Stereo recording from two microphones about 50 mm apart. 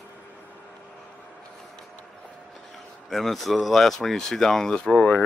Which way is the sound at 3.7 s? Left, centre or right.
Centre.